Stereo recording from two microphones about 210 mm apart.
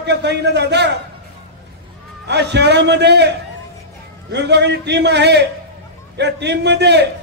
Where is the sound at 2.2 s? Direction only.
55° right (ahead or behind).